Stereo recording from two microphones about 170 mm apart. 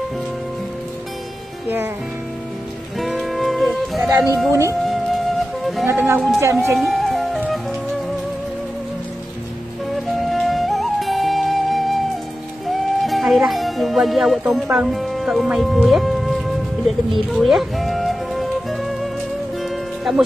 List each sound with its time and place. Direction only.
3.0 s music: centre (ahead or behind)
4.5 s speech: 20° right (ahead or behind)
4.8 s flute: centre (ahead or behind)
5.9 s speech: 15° right (ahead or behind)
6.8 s music: centre (ahead or behind)
9.9 s music: centre (ahead or behind)